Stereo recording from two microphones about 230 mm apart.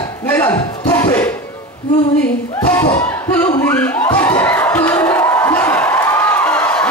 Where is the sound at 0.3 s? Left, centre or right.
Centre.